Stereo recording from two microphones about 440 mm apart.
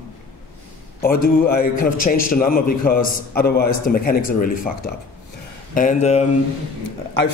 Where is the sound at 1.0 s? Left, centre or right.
Left.